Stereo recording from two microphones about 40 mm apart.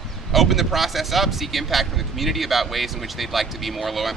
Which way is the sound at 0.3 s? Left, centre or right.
Centre.